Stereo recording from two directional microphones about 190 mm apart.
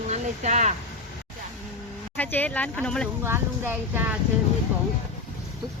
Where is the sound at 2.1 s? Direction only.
10° left (ahead or behind).